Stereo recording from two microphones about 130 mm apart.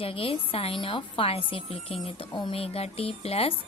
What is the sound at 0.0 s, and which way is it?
A woman's voice, 45° left (ahead or behind).